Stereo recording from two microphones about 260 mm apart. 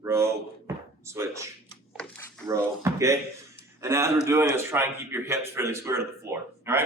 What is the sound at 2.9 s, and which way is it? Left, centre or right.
A man's voice, centre.